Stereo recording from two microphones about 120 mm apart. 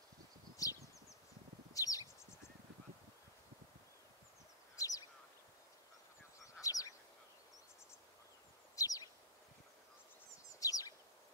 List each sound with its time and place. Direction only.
0.6 s rustling leaves: 30° left (ahead or behind)
1.7 s bird: 30° left (ahead or behind)
4.7 s duck: 30° left (ahead or behind)
6.6 s duck: 30° left (ahead or behind)
8.7 s bird: 30° left (ahead or behind)
10.6 s bird: 30° left (ahead or behind)